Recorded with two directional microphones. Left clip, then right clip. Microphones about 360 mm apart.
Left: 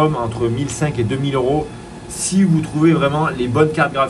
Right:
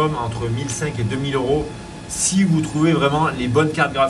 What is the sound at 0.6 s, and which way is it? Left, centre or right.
A man's voice, centre.